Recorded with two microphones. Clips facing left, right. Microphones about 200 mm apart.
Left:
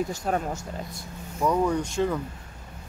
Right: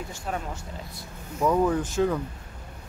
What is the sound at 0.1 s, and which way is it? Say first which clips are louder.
Speech: left 5 dB; 40° left (ahead or behind).